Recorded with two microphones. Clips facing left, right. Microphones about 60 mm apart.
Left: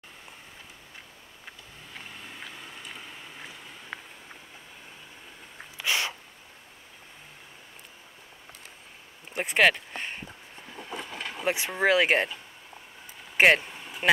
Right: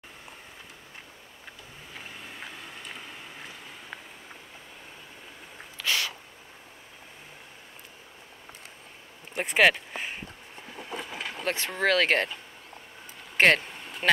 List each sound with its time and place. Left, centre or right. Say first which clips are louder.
2.0 s vehicle: right 1 dB; centre
5.6 s a sound: left 1 dB; centre
9.3 s speech: right 1 dB; centre
10.7 s a sound: right 1 dB; centre
11.4 s speech: left 2 dB; centre
13.2 s vehicle: left 1 dB; centre